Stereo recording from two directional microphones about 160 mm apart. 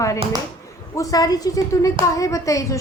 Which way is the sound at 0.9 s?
20° left (ahead or behind).